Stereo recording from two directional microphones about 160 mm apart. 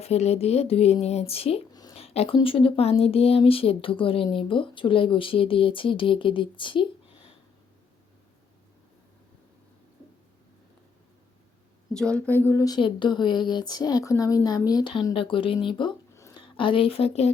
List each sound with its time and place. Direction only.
0.0 s speech: 40° left (ahead or behind)
1.7 s a sound: 25° left (ahead or behind)
2.0 s speech: 40° left (ahead or behind)
11.9 s a woman's voice: 5° left (ahead or behind)
12.5 s a woman's voice: 20° left (ahead or behind)
16.1 s a sound: 20° left (ahead or behind)
16.6 s speech: 35° left (ahead or behind)